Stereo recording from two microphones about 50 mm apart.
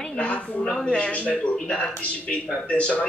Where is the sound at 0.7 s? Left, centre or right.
Centre.